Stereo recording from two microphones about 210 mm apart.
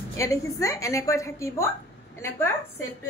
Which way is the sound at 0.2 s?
15° left (ahead or behind).